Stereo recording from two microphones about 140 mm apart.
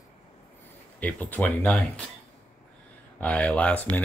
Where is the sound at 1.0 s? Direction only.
10° left (ahead or behind).